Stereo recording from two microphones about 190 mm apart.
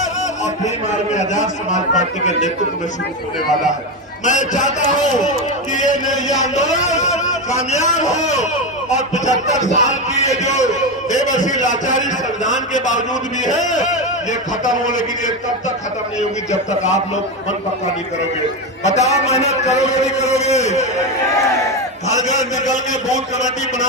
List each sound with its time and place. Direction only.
0.9 s a man's voice: 40° left (ahead or behind)
4.3 s a man's voice: 40° left (ahead or behind)
16.5 s a man's voice: 40° left (ahead or behind)
18.8 s a man's voice: 35° left (ahead or behind)
22.1 s a man's voice: 40° left (ahead or behind)